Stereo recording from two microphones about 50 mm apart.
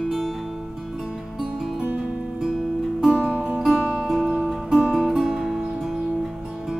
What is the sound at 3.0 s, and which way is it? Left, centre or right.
Music, centre.